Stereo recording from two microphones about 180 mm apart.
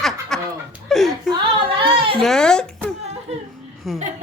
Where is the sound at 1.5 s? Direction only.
30° right (ahead or behind).